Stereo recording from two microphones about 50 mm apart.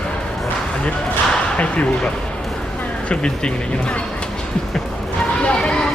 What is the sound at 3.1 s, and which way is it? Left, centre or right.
Speech, left.